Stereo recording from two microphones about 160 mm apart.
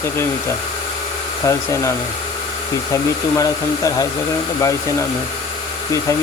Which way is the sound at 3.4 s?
20° left (ahead or behind).